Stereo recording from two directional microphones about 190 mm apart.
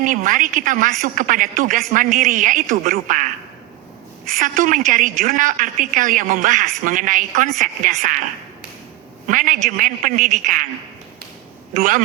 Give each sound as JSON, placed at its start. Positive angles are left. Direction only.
{"t": 0.0, "sound": "a woman's voice", "side_deg": -45}
{"t": 4.4, "sound": "a woman's voice", "side_deg": -45}
{"t": 9.2, "sound": "a woman's voice", "side_deg": -45}
{"t": 11.7, "sound": "a woman's voice", "side_deg": -45}